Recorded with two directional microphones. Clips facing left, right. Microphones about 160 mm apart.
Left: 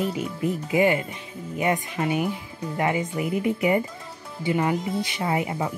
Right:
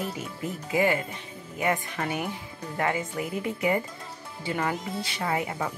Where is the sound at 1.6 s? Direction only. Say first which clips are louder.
Left 3 dB; 15° left (ahead or behind).